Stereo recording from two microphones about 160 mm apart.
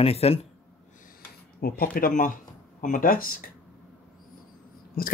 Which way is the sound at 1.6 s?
65° left (ahead or behind).